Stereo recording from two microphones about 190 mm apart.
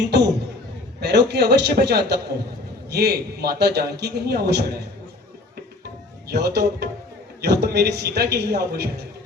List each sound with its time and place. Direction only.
0.1 s a man's voice: 65° right (ahead or behind)
6.2 s a man's voice: 60° right (ahead or behind)